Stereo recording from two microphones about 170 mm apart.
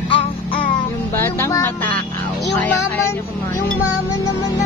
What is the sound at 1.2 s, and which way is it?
Music, 15° left (ahead or behind).